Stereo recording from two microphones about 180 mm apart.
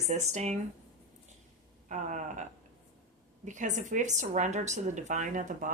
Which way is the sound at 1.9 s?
40° right (ahead or behind).